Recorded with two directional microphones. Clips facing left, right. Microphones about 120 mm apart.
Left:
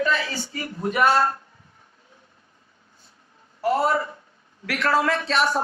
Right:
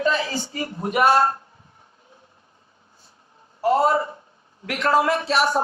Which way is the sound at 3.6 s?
25° right (ahead or behind).